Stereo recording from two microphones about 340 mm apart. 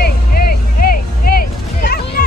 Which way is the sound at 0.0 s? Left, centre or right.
Left.